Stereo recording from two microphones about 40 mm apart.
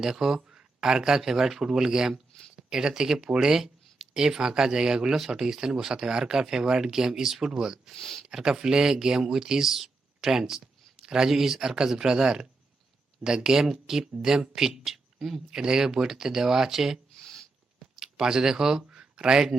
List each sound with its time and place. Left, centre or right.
0.0 s speech: centre
7.9 s speech: centre
8.3 s speech: centre
18.9 s a sound: centre